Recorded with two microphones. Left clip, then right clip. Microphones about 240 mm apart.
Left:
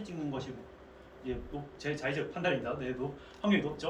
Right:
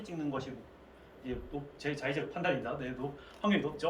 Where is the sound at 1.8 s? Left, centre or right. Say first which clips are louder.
Left 1 dB; centre.